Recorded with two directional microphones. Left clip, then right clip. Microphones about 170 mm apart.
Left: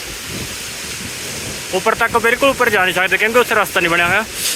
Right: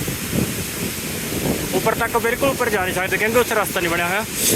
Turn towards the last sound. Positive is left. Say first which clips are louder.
# left 6 dB
turn(degrees=0)  # may be behind; listen again after turning